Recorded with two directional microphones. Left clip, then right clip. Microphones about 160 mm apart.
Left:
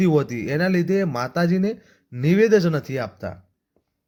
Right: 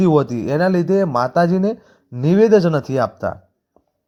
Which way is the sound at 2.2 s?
5° right (ahead or behind).